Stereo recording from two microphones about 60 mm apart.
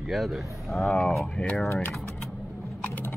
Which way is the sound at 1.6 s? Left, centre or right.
Left.